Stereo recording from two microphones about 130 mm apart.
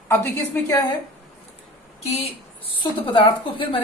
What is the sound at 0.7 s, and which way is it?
Speech, 30° left (ahead or behind).